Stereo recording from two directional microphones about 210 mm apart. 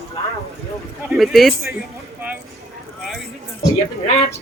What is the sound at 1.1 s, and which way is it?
Speech, centre (ahead or behind).